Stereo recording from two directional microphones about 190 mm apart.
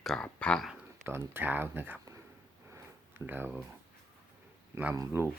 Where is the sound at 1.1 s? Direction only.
10° right (ahead or behind).